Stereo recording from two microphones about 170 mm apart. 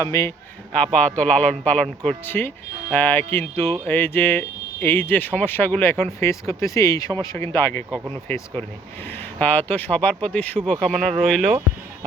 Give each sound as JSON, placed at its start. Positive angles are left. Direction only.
{"t": 0.0, "sound": "a man's voice", "side_deg": 20}
{"t": 0.7, "sound": "speech", "side_deg": 5}